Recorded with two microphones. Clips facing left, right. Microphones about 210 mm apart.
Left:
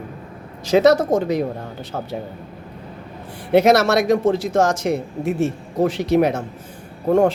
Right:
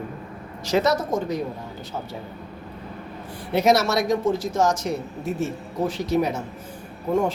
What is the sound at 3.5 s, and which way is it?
Speech, 60° left (ahead or behind).